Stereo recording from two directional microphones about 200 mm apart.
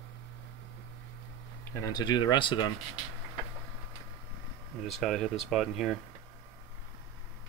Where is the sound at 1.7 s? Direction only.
20° left (ahead or behind).